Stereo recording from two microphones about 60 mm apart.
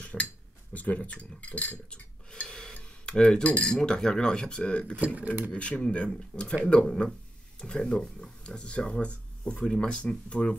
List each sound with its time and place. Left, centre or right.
0.0 s dishes: centre
0.7 s cutlery: left
2.4 s cutlery: centre
4.9 s speech: right
5.5 s speech: centre